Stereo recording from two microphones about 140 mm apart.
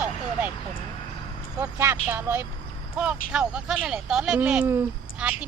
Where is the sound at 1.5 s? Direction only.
20° right (ahead or behind).